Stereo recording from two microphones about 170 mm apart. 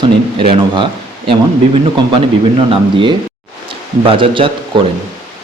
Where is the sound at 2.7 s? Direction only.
30° right (ahead or behind).